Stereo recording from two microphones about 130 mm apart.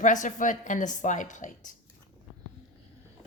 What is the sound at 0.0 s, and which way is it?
A woman's voice, 75° left (ahead or behind).